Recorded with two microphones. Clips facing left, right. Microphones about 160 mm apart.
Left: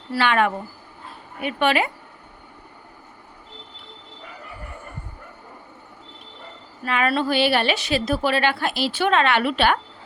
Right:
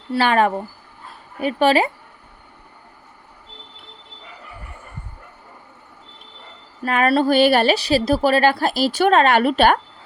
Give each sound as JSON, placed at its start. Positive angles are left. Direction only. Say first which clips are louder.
{"t": 0.2, "sound": "a woman's voice", "louder": "right 3 dB", "side_deg": -35}
{"t": 6.8, "sound": "a woman's voice", "louder": "right 5 dB", "side_deg": -45}